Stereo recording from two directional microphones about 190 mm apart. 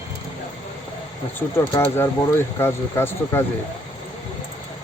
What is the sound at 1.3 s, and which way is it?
Speech, 10° left (ahead or behind).